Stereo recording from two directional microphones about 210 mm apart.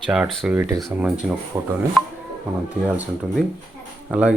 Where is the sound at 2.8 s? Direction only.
5° right (ahead or behind).